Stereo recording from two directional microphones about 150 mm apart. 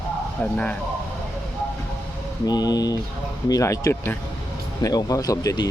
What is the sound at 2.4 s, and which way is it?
A man's voice, 25° left (ahead or behind).